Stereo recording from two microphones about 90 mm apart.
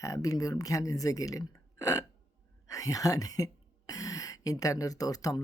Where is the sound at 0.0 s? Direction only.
40° left (ahead or behind).